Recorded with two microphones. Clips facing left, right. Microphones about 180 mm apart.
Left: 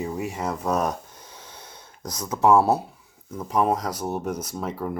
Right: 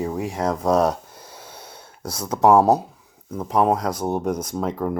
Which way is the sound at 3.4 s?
10° right (ahead or behind).